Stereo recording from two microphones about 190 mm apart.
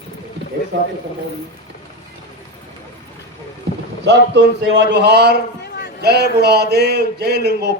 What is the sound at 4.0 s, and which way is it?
A man's voice, 70° right (ahead or behind).